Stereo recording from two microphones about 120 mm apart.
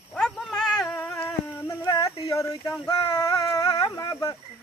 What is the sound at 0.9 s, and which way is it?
Cat, 20° left (ahead or behind).